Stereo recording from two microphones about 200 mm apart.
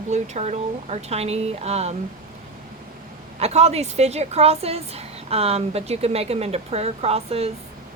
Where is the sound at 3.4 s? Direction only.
35° right (ahead or behind).